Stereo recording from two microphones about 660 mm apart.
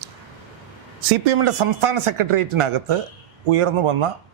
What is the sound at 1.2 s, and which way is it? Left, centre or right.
Speech, right.